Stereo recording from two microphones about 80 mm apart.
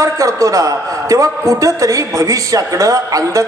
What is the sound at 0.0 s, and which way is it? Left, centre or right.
A man's voice, right.